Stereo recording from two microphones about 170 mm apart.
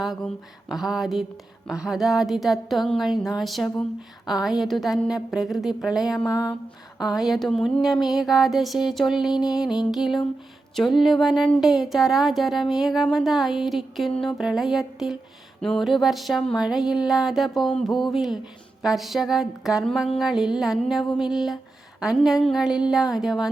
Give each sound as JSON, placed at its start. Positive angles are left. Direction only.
{"t": 0.0, "sound": "speech", "side_deg": 0}
{"t": 6.2, "sound": "a sound", "side_deg": 20}
{"t": 7.1, "sound": "speech", "side_deg": 0}